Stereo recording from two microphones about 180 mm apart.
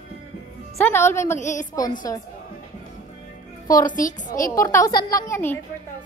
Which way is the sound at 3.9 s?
45° left (ahead or behind).